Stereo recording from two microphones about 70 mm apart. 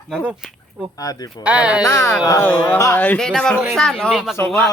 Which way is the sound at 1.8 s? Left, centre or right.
Left.